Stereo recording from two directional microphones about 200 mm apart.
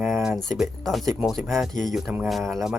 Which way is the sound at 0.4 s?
Centre (ahead or behind).